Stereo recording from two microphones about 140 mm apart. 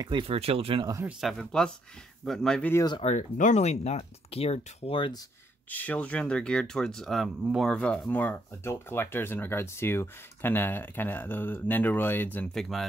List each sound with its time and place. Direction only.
0.0 s speech: 35° right (ahead or behind)
1.0 s speech: centre (ahead or behind)
2.7 s speech: 25° left (ahead or behind)
3.0 s speech: 60° left (ahead or behind); by 5.1 s 40° left (ahead or behind)
5.7 s speech: 10° left (ahead or behind)
12.5 s speech: centre (ahead or behind)